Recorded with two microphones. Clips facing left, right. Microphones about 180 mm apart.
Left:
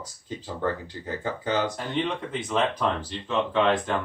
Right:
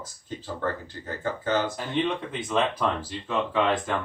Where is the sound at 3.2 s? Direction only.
5° right (ahead or behind).